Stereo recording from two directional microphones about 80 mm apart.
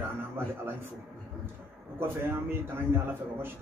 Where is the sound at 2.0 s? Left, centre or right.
Right.